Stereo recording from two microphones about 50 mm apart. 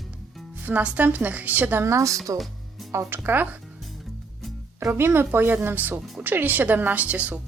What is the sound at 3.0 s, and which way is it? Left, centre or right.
Speech, right.